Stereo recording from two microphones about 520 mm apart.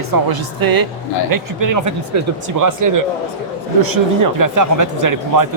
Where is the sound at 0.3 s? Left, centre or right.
Right.